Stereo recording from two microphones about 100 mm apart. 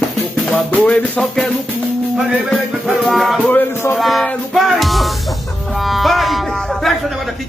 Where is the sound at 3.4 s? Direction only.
15° left (ahead or behind).